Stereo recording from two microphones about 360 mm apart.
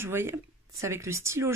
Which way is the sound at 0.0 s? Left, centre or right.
Centre.